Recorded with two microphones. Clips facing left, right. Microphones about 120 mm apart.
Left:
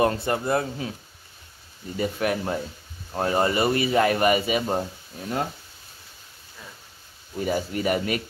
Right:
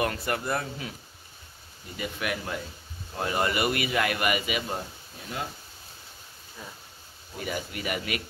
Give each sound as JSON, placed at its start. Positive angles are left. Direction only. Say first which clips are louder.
{"t": 0.0, "sound": "speech", "louder": "left 6 dB", "side_deg": 25}
{"t": 2.0, "sound": "speech", "louder": "left 7 dB", "side_deg": 40}
{"t": 7.4, "sound": "speech", "louder": "left 8 dB", "side_deg": 35}